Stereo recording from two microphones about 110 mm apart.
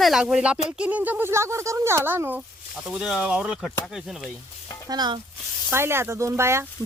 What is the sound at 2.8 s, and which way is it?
Speech, 5° right (ahead or behind).